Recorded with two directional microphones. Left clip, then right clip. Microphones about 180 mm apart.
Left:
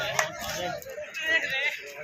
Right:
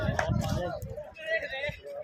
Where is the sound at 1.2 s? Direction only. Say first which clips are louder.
Left 6 dB; 60° right (ahead or behind).